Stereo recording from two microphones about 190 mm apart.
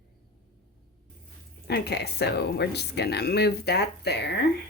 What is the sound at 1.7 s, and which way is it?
Speech, 60° left (ahead or behind).